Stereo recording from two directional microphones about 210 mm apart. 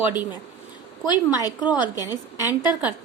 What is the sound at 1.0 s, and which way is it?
A woman's voice, 20° left (ahead or behind).